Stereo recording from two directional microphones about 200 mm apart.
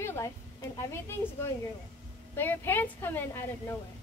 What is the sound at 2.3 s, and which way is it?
A woman's voice, 10° left (ahead or behind).